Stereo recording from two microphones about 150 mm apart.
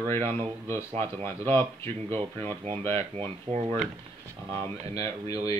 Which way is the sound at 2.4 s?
40° right (ahead or behind).